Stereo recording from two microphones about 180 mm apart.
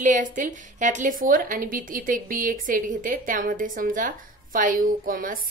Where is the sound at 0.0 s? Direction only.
45° right (ahead or behind).